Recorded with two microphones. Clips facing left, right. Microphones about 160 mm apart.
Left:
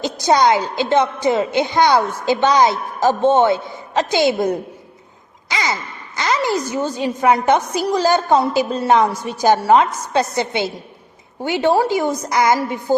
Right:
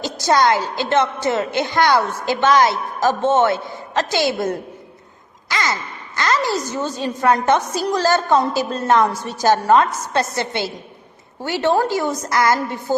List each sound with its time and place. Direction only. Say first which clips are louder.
0.0 s a woman's voice: left 2 dB; 20° left (ahead or behind)
6.1 s a woman's voice: left 1 dB; 15° left (ahead or behind)